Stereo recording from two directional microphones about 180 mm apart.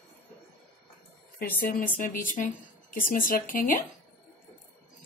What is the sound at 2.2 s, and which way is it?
Speech, 45° left (ahead or behind).